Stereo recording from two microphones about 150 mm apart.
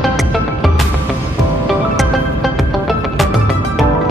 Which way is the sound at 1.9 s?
Centre (ahead or behind).